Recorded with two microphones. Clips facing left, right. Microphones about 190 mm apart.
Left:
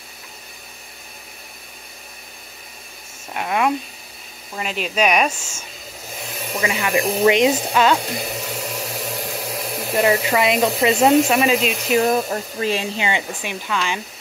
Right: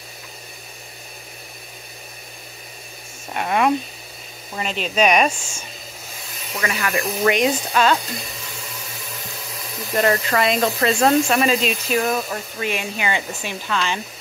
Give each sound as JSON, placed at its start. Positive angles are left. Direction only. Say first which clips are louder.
{"t": 3.3, "sound": "speech", "louder": "right 1 dB", "side_deg": 0}
{"t": 6.5, "sound": "speech", "louder": "left 3 dB", "side_deg": 20}
{"t": 8.0, "sound": "hair dryer", "louder": "left 6 dB", "side_deg": 70}
{"t": 9.9, "sound": "speech", "louder": "left 1 dB", "side_deg": 10}
{"t": 11.9, "sound": "speech", "louder": "left 6 dB", "side_deg": 25}